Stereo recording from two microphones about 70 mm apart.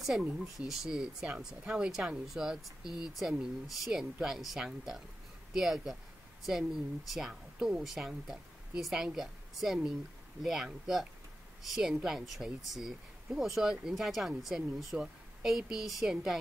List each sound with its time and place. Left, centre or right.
0.2 s a woman's voice: centre